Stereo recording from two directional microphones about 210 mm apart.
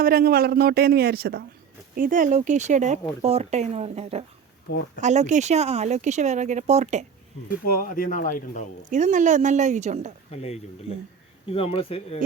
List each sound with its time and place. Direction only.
0.0 s speech: 45° right (ahead or behind)
7.4 s speech: 45° left (ahead or behind)
8.9 s speech: 35° right (ahead or behind)
10.3 s speech: 30° left (ahead or behind)